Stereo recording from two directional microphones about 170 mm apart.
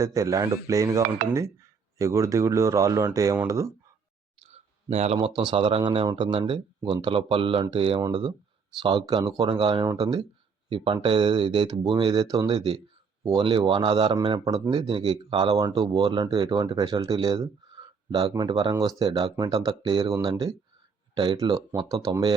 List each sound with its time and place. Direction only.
0.0 s speech: 20° right (ahead or behind)
4.4 s speech: 40° right (ahead or behind); by 22.4 s 20° right (ahead or behind)